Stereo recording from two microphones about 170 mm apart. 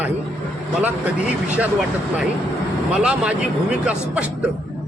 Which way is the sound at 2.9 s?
5° right (ahead or behind).